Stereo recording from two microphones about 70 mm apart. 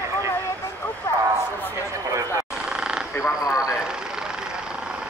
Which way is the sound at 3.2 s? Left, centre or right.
Left.